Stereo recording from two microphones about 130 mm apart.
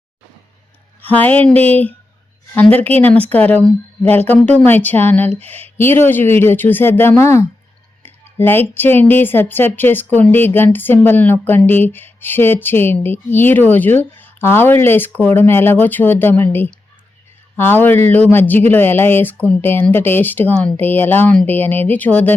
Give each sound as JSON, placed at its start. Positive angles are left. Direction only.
{"t": 1.0, "sound": "speech", "side_deg": 15}